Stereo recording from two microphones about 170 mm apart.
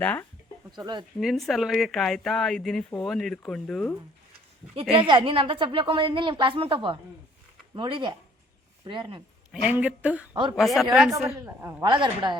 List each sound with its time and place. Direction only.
0.0 s speech: 10° left (ahead or behind)
0.8 s a woman's voice: 25° right (ahead or behind)
1.2 s speech: centre (ahead or behind)
4.7 s a woman's voice: 35° right (ahead or behind)
9.6 s speech: 5° right (ahead or behind)
11.4 s speech: 15° right (ahead or behind)
11.9 s a woman's voice: 30° right (ahead or behind)